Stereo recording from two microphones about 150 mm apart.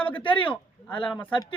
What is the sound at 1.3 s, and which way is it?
Speech, 35° left (ahead or behind).